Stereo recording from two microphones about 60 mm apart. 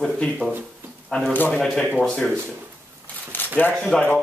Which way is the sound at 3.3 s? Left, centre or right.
Left.